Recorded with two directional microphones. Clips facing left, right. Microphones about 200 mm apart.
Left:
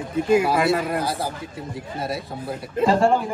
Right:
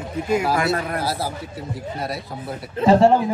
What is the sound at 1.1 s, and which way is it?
Speech, 5° right (ahead or behind).